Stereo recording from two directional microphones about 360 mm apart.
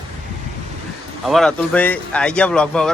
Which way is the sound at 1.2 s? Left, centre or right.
Centre.